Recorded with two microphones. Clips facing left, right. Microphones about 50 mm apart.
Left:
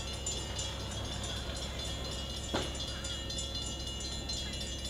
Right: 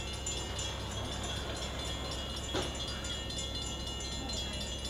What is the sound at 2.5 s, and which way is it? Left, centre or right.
Train, centre.